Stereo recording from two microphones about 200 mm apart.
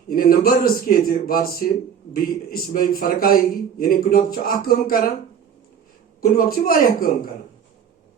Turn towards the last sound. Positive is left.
turn(degrees=45)  # may be behind; listen again after turning